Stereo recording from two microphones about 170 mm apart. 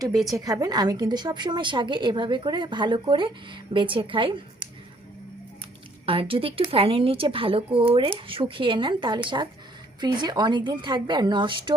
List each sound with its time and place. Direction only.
0.1 s a woman's voice: centre (ahead or behind)
0.3 s a woman's voice: 20° right (ahead or behind)
6.1 s a woman's voice: 30° right (ahead or behind)